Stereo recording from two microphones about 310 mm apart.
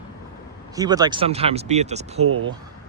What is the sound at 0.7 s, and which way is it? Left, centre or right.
Speech, centre.